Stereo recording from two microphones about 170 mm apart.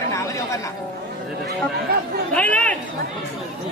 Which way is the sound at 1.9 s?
65° right (ahead or behind).